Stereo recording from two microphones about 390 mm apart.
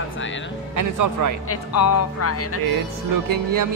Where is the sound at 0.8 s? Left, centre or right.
Right.